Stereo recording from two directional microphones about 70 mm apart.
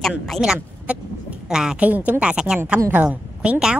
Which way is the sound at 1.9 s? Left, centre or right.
Right.